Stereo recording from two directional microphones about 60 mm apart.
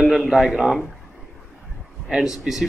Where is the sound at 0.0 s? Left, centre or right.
Centre.